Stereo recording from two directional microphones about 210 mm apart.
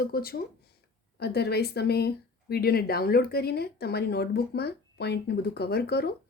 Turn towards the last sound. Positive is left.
turn(degrees=50)  # may be behind; listen again after turning